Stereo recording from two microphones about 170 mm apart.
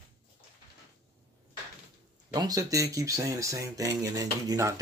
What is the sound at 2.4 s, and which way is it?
Speech, 20° right (ahead or behind).